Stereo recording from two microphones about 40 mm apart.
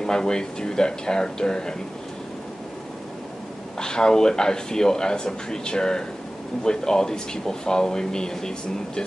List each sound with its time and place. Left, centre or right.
0.0 s speech: centre
3.8 s speech: centre